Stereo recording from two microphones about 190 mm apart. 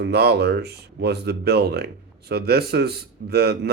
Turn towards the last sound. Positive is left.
turn(degrees=-55)  # may be behind; listen again after turning